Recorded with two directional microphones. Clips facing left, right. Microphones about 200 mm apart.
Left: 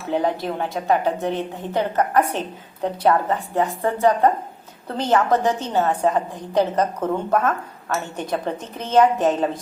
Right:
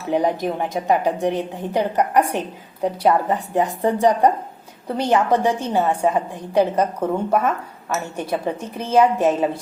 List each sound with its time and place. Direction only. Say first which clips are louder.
0.1 s a woman's voice: right 2 dB; 15° right (ahead or behind)